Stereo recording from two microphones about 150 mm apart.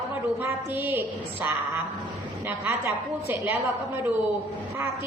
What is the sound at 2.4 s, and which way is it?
A woman's voice, 15° right (ahead or behind).